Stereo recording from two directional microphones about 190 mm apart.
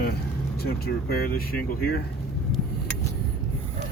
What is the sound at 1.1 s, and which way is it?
Speech, 50° left (ahead or behind).